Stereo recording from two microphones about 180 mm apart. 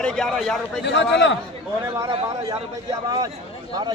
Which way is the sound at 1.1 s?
90° left.